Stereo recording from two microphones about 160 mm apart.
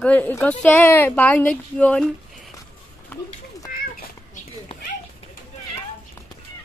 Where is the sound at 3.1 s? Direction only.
10° left (ahead or behind).